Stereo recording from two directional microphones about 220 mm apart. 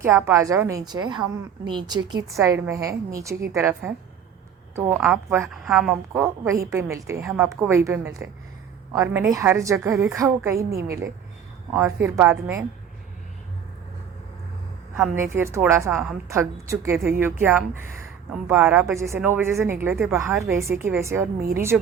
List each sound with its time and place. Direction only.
0.0 s a woman's voice: 10° right (ahead or behind)
14.9 s a woman's voice: 10° right (ahead or behind)